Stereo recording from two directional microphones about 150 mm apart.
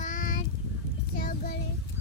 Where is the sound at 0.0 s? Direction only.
60° left (ahead or behind).